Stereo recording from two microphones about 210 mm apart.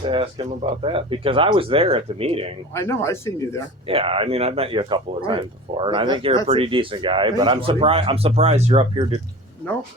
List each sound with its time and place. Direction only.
0.0 s a man's voice: 25° right (ahead or behind)
2.7 s speech: 15° left (ahead or behind)
3.8 s a man's voice: 25° right (ahead or behind)